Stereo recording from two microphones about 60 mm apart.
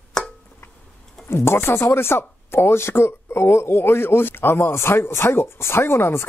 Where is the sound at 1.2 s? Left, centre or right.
Left.